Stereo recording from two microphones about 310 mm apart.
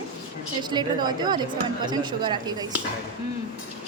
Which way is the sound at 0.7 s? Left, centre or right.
Centre.